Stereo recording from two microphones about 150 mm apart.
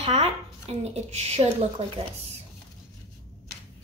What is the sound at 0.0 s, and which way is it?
A woman's voice, 45° right (ahead or behind).